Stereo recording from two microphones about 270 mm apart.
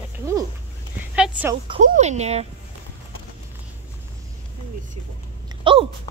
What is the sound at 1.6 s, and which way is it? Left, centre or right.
Speech, right.